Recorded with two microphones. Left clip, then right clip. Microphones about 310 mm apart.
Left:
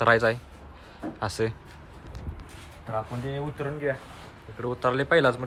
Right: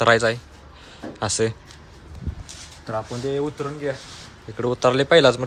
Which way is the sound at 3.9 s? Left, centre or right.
Centre.